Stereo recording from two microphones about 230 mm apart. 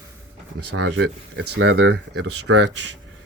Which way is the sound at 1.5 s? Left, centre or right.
Right.